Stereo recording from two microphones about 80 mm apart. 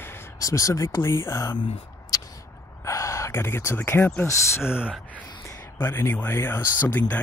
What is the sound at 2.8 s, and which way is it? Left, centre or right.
Speech, left.